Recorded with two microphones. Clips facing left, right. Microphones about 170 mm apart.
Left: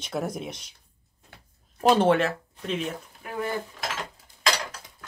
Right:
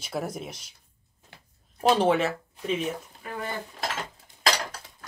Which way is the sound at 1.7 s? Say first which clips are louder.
Left 2 dB; centre (ahead or behind).